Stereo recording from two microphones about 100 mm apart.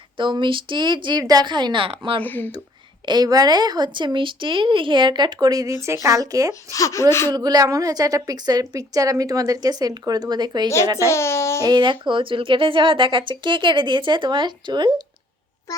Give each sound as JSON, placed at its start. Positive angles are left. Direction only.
{"t": 0.2, "sound": "speech", "side_deg": -55}
{"t": 2.2, "sound": "a child's voice", "side_deg": 20}
{"t": 3.1, "sound": "a woman's voice", "side_deg": -40}
{"t": 6.5, "sound": "a child's voice", "side_deg": 30}
{"t": 7.3, "sound": "a woman's voice", "side_deg": -40}
{"t": 10.9, "sound": "a child's voice", "side_deg": 30}
{"t": 11.6, "sound": "speech", "side_deg": -50}